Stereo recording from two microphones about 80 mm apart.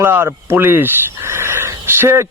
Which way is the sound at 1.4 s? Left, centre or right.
Right.